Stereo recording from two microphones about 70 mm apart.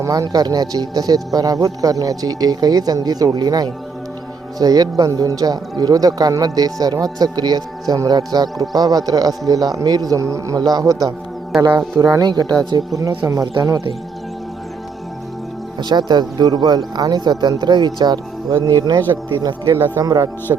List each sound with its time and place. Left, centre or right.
0.0 s speech: right
8.7 s speech: right
10.6 s speech: right
11.9 s speech: right
15.8 s speech: right
18.4 s speech: right